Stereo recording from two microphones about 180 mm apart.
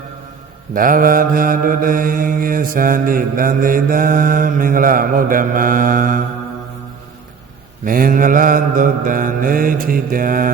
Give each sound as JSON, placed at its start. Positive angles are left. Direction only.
{"t": 0.7, "sound": "mantra", "side_deg": -50}
{"t": 7.9, "sound": "mantra", "side_deg": -50}